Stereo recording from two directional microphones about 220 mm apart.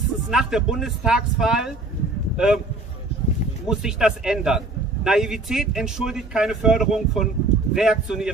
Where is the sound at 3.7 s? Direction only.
5° right (ahead or behind).